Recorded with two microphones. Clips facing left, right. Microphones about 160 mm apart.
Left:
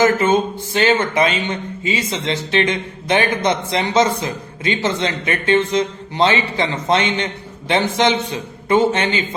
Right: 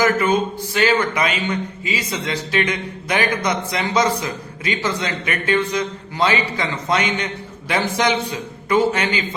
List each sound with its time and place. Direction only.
0.0 s speech: 25° left (ahead or behind)